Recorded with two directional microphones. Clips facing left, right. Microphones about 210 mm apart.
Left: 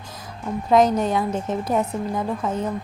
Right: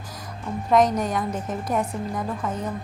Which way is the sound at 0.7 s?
30° left (ahead or behind).